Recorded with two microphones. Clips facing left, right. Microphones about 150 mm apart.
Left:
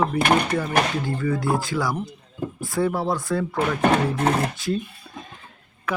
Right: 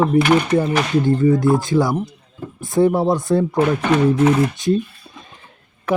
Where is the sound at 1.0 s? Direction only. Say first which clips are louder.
Right 9 dB; 25° right (ahead or behind).